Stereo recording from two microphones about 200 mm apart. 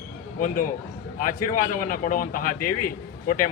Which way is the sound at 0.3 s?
40° left (ahead or behind).